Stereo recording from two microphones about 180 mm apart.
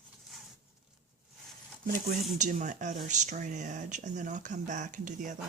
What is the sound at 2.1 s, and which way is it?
Speech, 40° right (ahead or behind).